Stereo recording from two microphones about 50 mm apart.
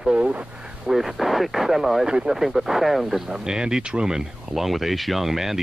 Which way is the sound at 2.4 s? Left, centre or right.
Centre.